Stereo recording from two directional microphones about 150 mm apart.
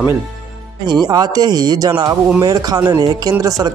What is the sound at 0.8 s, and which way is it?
Speech, 25° right (ahead or behind).